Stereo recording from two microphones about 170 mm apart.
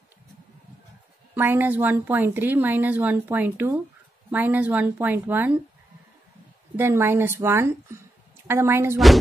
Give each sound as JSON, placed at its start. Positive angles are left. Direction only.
{"t": 1.3, "sound": "a woman's voice", "side_deg": -10}
{"t": 6.8, "sound": "a woman's voice", "side_deg": -15}